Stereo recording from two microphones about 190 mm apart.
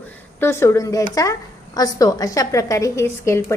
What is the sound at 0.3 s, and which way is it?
A woman's voice, 10° left (ahead or behind).